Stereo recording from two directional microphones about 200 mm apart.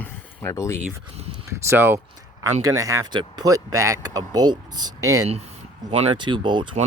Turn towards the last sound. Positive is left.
turn(degrees=-25)  # may be behind; listen again after turning